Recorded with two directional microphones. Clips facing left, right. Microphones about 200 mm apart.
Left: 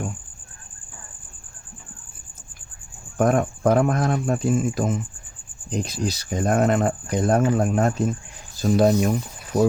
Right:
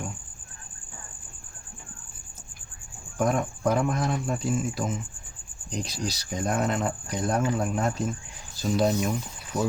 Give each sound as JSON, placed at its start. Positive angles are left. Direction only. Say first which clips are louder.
{"t": 3.2, "sound": "speech", "louder": "left 6 dB", "side_deg": 55}